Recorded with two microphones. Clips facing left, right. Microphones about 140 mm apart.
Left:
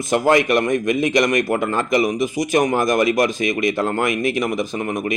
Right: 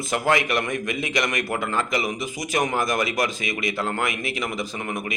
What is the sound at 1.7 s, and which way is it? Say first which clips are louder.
Speech: left 7 dB; 20° left (ahead or behind).